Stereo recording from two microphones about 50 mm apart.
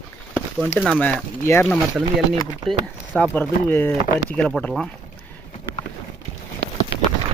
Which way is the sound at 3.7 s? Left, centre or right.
Left.